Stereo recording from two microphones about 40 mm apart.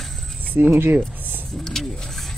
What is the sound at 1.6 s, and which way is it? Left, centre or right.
Speech, centre.